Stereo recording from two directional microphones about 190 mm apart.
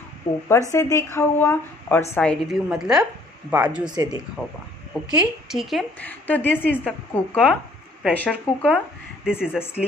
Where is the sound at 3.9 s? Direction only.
20° right (ahead or behind).